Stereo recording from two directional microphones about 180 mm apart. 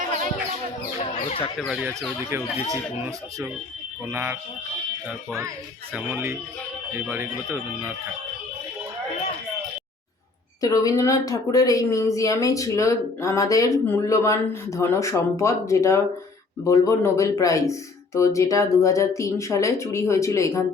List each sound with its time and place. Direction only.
0.9 s chicken: 30° left (ahead or behind)
1.5 s speech: centre (ahead or behind)
2.3 s speech: 15° right (ahead or behind)
4.0 s speech: 10° right (ahead or behind)
5.9 s speech: 10° right (ahead or behind)
10.6 s speech: 20° left (ahead or behind)